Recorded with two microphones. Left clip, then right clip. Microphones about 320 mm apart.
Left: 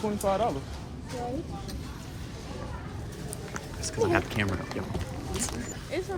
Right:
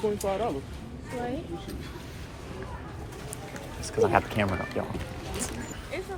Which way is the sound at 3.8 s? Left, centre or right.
Centre.